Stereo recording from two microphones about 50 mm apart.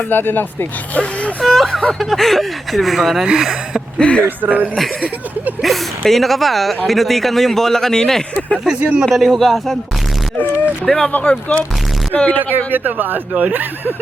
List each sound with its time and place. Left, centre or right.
0.1 s speech: left
1.4 s speech: centre
3.9 s speech: left
4.4 s speech: right
5.6 s speech: centre
8.7 s speech: right
9.0 s speech: centre
10.8 s speech: centre
11.1 s speech: left
12.7 s speech: right